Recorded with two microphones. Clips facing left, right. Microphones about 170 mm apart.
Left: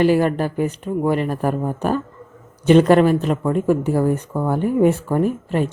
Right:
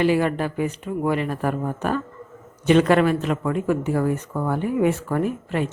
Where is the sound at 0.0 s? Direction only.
40° left (ahead or behind).